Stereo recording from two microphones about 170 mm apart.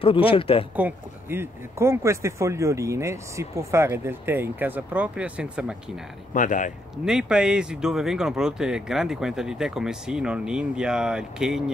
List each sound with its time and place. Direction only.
0.0 s speech: 30° left (ahead or behind)
0.7 s speech: 10° right (ahead or behind)
6.3 s speech: 50° left (ahead or behind)
7.1 s speech: 5° right (ahead or behind)